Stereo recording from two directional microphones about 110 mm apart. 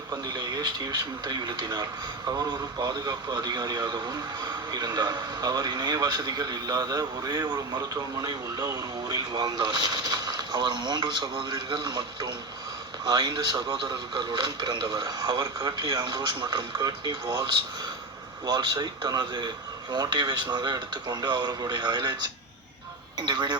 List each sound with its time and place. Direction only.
0.1 s a man's voice: 40° right (ahead or behind)
23.1 s a man's voice: 40° right (ahead or behind)